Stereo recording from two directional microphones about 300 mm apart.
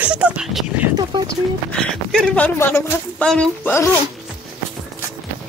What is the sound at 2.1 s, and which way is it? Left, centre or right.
Speech, centre.